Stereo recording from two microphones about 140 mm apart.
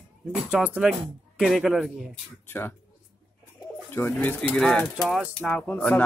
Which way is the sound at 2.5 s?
15° left (ahead or behind).